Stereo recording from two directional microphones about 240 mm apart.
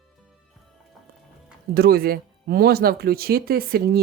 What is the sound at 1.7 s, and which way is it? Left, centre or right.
Speech, right.